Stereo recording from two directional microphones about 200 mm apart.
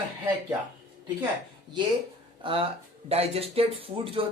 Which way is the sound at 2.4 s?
25° right (ahead or behind).